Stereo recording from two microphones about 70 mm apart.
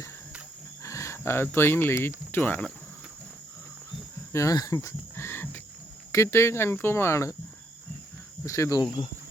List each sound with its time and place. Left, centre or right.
0.8 s speech: left
4.3 s speech: left
4.5 s speech: left
5.1 s cricket: left
6.1 s speech: left
8.4 s speech: left
8.8 s speech: left